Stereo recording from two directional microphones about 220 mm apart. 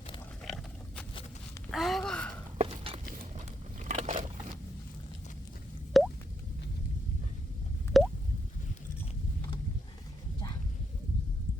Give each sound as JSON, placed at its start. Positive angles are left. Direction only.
{"t": 0.4, "sound": "pig", "side_deg": 0}
{"t": 1.7, "sound": "a sound", "side_deg": 0}
{"t": 2.6, "sound": "a sound", "side_deg": -25}
{"t": 3.8, "sound": "biting", "side_deg": -30}
{"t": 6.0, "sound": "plop", "side_deg": 0}
{"t": 7.9, "sound": "plop", "side_deg": 0}